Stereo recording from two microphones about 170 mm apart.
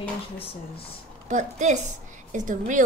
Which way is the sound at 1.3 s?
45° right (ahead or behind).